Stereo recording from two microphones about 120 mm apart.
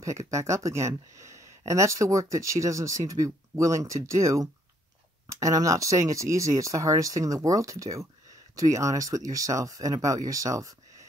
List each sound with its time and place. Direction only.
0.0 s speech: 25° right (ahead or behind)